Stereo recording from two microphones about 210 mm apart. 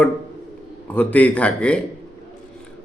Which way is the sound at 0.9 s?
5° left (ahead or behind).